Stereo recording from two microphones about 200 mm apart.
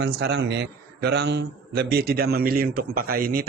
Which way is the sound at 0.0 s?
55° right (ahead or behind).